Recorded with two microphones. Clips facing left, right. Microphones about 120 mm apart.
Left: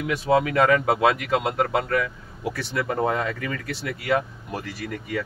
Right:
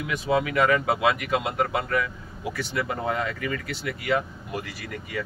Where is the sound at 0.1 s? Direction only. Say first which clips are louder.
Left 3 dB; 35° left (ahead or behind).